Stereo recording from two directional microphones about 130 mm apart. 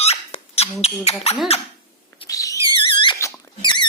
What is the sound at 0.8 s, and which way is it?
Beatboxing, 55° left (ahead or behind).